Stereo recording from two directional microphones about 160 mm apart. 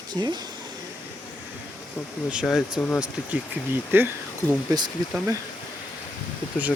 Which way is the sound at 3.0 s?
10° right (ahead or behind).